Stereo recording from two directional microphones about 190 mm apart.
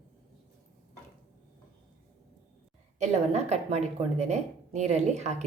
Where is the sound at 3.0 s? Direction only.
35° right (ahead or behind).